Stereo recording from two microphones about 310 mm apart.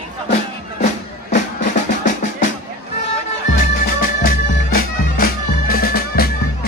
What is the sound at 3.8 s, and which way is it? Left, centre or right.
Music, left.